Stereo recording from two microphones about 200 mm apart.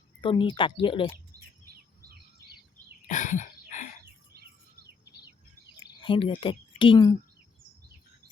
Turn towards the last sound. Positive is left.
turn(degrees=20)  # may be behind; listen again after turning